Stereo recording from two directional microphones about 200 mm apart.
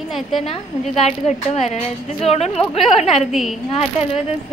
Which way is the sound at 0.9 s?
35° left (ahead or behind).